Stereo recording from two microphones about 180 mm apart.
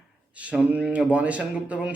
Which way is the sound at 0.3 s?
10° right (ahead or behind).